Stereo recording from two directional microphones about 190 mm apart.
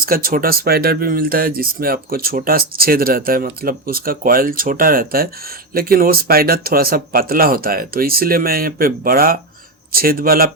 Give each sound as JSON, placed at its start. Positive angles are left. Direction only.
{"t": 0.0, "sound": "speech", "side_deg": -50}